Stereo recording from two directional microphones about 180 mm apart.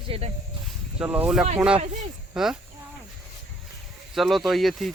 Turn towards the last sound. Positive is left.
turn(degrees=0)  # may be behind; listen again after turning